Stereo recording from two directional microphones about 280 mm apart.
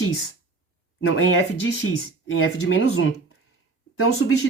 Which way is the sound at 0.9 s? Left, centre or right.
Left.